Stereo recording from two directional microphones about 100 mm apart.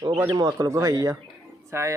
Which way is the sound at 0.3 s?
45° right (ahead or behind).